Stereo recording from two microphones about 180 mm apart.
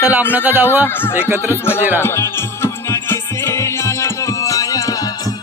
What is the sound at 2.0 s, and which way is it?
Music, 15° left (ahead or behind).